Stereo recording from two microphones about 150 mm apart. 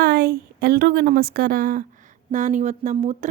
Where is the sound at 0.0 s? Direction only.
90° right; by 1.8 s 70° right (ahead or behind).